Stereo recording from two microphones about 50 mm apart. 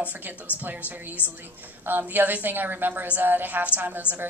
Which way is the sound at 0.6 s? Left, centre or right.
Right.